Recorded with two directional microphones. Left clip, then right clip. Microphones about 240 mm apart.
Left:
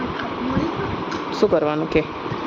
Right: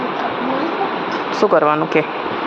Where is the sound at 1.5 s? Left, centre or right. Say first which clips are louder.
Right 5 dB; centre.